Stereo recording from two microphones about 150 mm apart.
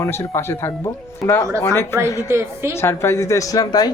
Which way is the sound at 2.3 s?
15° right (ahead or behind).